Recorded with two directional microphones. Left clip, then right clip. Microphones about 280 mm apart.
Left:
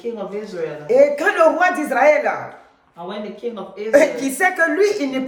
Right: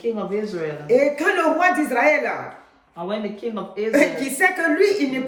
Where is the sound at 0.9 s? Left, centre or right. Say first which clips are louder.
Left 5 dB; centre.